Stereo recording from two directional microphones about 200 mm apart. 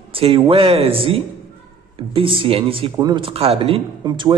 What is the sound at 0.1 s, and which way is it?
A man's voice, 25° right (ahead or behind).